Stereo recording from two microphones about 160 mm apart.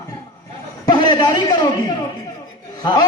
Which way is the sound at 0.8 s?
30° left (ahead or behind).